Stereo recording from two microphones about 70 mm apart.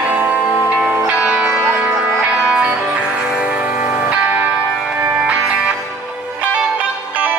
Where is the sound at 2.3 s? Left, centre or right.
Centre.